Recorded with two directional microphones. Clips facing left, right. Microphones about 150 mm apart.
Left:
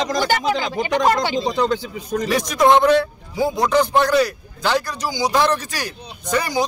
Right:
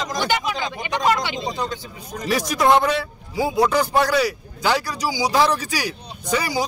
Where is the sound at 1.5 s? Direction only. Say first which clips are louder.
Left 7 dB; 85° left.